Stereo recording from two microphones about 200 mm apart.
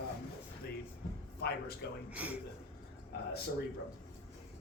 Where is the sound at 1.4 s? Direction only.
55° left (ahead or behind).